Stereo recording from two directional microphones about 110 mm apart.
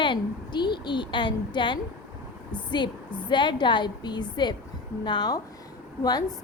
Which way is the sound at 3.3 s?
45° left (ahead or behind).